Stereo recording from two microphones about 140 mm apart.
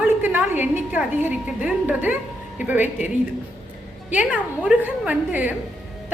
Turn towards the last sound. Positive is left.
turn(degrees=-10)  # may be behind; listen again after turning